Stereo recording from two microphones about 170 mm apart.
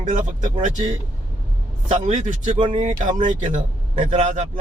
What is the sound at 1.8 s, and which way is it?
Speech, 40° right (ahead or behind).